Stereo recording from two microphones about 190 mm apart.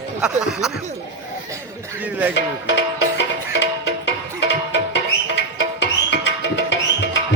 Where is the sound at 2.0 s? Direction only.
10° right (ahead or behind).